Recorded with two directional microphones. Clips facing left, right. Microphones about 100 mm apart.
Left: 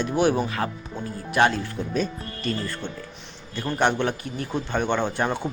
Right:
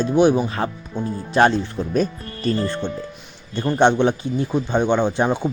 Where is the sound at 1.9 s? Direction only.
45° right (ahead or behind).